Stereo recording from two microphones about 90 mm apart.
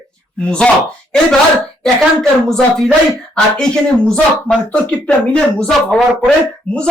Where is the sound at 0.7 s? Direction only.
15° left (ahead or behind).